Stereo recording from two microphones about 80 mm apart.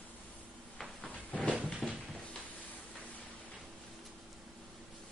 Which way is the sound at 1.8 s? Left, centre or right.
Centre.